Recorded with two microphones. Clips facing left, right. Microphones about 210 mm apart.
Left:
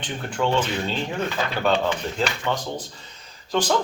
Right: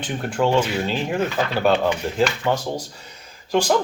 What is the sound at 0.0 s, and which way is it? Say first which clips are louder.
Speech: right 4 dB; 10° right (ahead or behind).